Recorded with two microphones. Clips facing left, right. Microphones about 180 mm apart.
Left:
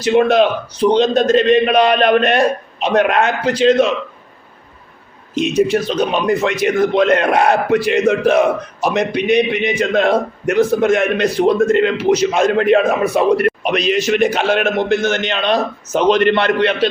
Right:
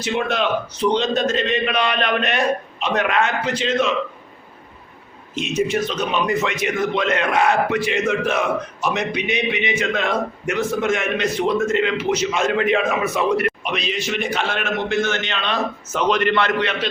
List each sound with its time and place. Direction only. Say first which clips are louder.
0.1 s a man's voice: left 9 dB; 35° left (ahead or behind)
2.9 s a man's voice: left 6 dB; 60° left (ahead or behind)
3.4 s a man's voice: left 8 dB; 35° left (ahead or behind)
5.3 s a man's voice: left 6 dB; 35° left (ahead or behind)